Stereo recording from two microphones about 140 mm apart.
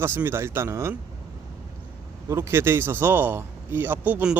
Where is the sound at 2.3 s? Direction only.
20° right (ahead or behind).